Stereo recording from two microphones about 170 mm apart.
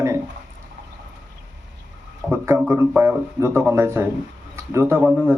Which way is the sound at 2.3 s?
15° right (ahead or behind).